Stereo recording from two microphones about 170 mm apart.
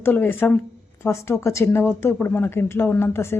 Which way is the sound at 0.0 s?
10° left (ahead or behind).